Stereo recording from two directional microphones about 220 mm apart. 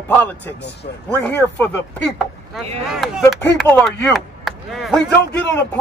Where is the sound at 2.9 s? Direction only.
Centre (ahead or behind).